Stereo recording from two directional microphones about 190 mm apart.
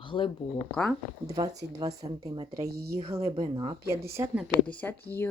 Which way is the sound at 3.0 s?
30° right (ahead or behind).